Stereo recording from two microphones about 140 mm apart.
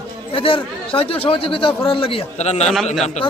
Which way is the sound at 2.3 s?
50° left (ahead or behind).